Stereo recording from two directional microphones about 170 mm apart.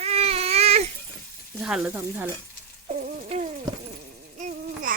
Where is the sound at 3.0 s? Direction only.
45° right (ahead or behind).